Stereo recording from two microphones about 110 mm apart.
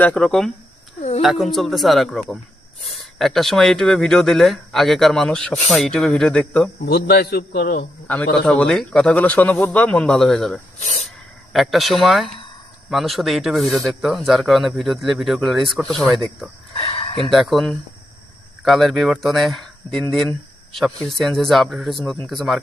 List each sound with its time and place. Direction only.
0.0 s a man's voice: 10° left (ahead or behind)
8.0 s a man's voice: 15° left (ahead or behind)
10.8 s speech: 85° left
11.5 s speech: centre (ahead or behind)
16.7 s a sound: 60° left (ahead or behind)
17.3 s speech: centre (ahead or behind)